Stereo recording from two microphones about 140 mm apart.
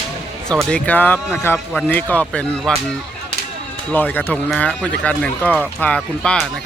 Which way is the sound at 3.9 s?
15° left (ahead or behind).